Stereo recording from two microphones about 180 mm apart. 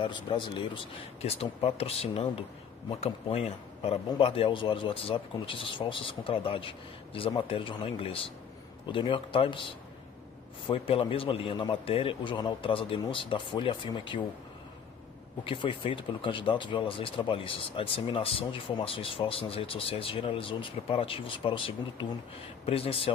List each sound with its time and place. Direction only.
0.0 s speech: 25° left (ahead or behind)
10.7 s speech: 30° left (ahead or behind)
15.4 s speech: 30° left (ahead or behind)